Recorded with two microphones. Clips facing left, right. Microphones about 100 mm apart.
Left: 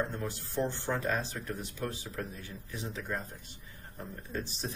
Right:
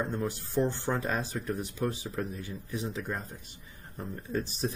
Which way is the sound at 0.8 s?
15° right (ahead or behind).